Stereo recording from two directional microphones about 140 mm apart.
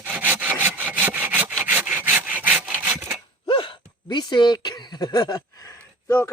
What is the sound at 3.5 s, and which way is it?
Sigh, 35° left (ahead or behind).